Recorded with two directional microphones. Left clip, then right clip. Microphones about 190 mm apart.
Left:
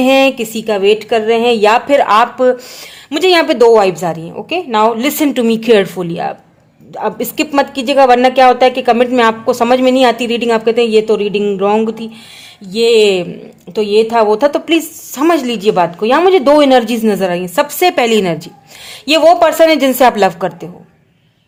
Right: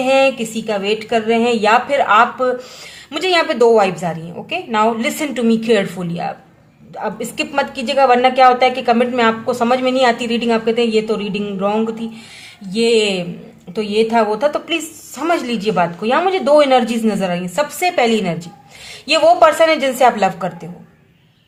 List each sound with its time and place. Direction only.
0.0 s a woman's voice: 45° left (ahead or behind)